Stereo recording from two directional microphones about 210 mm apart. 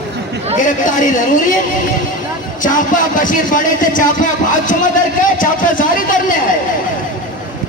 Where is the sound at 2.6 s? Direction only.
40° left (ahead or behind).